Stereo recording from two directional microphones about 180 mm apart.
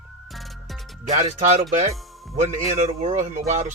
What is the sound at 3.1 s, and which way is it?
Speech, 45° right (ahead or behind).